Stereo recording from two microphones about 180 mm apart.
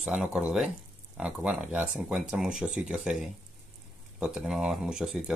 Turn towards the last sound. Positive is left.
turn(degrees=-5)  # may be behind; listen again after turning